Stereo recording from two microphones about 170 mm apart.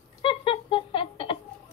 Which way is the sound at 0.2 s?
30° left (ahead or behind).